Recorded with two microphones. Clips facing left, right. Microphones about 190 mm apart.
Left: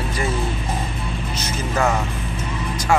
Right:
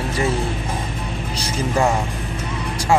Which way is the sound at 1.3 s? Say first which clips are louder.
Right 3 dB; 25° right (ahead or behind).